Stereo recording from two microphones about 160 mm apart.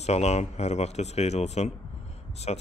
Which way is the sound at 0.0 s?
40° left (ahead or behind).